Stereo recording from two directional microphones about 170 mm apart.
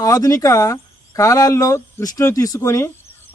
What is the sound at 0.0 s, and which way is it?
A man's voice, 20° left (ahead or behind).